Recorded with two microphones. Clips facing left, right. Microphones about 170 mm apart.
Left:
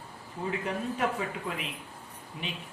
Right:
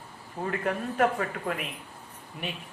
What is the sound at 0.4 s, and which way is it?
Speech, 50° right (ahead or behind).